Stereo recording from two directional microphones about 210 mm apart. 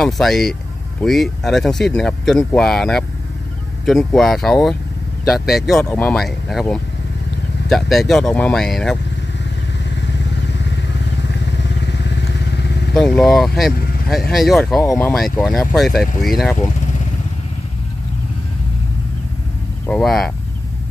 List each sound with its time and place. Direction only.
0.0 s speech: centre (ahead or behind)
9.8 s motorcycle: 55° left (ahead or behind)
11.2 s vehicle: 55° left (ahead or behind)
12.9 s speech: centre (ahead or behind)
19.9 s speech: centre (ahead or behind)